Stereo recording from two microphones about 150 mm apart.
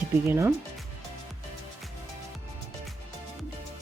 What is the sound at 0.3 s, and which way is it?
Speech, 15° right (ahead or behind).